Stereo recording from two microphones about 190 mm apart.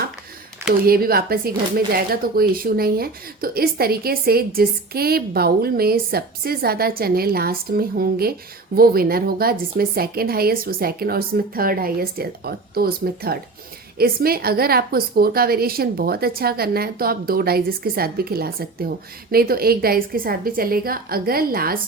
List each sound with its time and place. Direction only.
0.9 s speech: 50° right (ahead or behind)